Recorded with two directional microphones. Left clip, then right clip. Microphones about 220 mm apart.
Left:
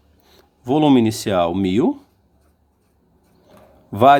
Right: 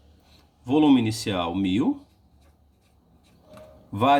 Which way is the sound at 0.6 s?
45° left (ahead or behind).